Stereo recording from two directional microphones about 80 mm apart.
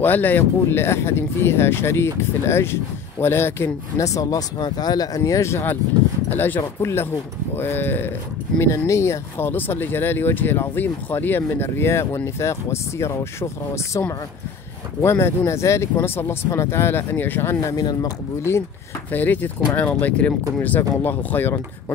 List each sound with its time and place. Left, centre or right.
0.0 s speech: left
4.0 s speech: left
8.5 s speech: left
17.7 s speech: left
18.5 s speech: left
19.1 s speech: left